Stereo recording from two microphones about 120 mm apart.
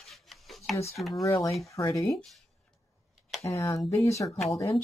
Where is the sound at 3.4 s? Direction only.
25° left (ahead or behind).